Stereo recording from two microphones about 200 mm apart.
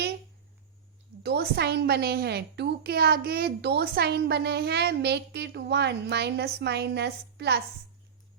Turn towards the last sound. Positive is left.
turn(degrees=-55)  # may be behind; listen again after turning